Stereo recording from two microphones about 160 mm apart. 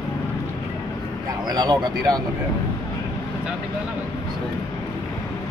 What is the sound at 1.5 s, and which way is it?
Speech, 25° right (ahead or behind).